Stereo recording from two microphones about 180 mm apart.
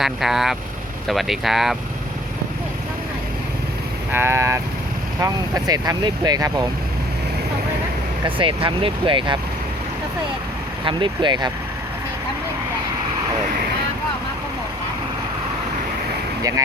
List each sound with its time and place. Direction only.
0.0 s speech: centre (ahead or behind)
4.1 s speech: 15° right (ahead or behind)
8.4 s speech: 30° right (ahead or behind)
10.8 s speech: 25° right (ahead or behind)